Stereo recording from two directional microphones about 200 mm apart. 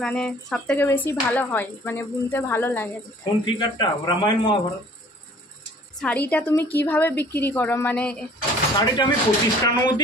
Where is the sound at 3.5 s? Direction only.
25° left (ahead or behind).